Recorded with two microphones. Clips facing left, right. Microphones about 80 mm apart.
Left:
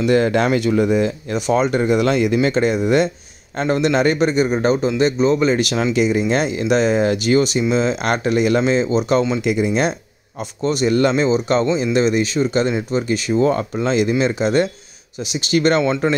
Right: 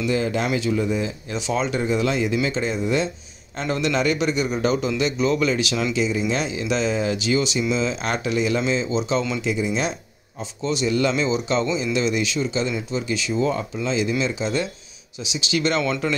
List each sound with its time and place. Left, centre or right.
0.0 s speech: left
3.5 s a man's voice: left
5.9 s speech: left
16.0 s a man's voice: left